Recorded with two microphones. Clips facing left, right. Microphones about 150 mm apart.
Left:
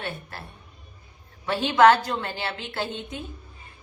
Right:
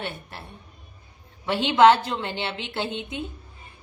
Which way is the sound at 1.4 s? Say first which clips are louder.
Right 1 dB; 20° right (ahead or behind).